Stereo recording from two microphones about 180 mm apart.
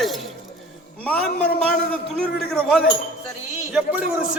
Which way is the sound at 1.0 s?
5° left (ahead or behind).